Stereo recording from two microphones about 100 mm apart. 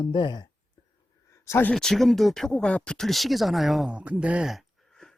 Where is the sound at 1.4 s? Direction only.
25° left (ahead or behind).